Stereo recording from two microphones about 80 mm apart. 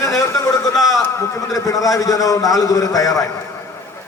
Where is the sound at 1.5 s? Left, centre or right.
Left.